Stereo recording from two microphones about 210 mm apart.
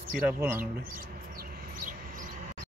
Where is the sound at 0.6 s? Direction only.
40° right (ahead or behind).